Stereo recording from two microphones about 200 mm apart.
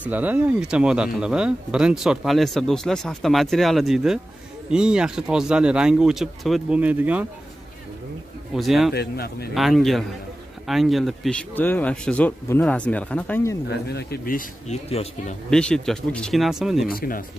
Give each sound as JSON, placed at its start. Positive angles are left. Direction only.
{"t": 0.0, "sound": "speech", "side_deg": -10}
{"t": 8.5, "sound": "speech", "side_deg": 0}
{"t": 8.9, "sound": "speech", "side_deg": 50}
{"t": 9.5, "sound": "speech", "side_deg": 0}
{"t": 13.7, "sound": "speech", "side_deg": 55}
{"t": 14.9, "sound": "speech", "side_deg": 30}
{"t": 15.5, "sound": "speech", "side_deg": 5}
{"t": 16.8, "sound": "speech", "side_deg": 45}